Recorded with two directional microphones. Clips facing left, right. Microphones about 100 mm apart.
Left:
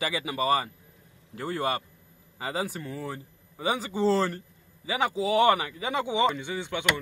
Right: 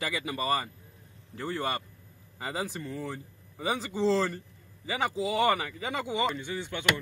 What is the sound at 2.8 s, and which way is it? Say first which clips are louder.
Speech: left 1 dB; 60° left (ahead or behind).